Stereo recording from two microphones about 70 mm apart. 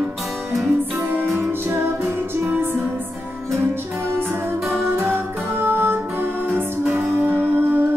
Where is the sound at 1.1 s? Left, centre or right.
Right.